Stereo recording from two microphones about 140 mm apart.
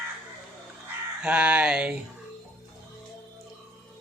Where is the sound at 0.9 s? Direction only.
10° right (ahead or behind).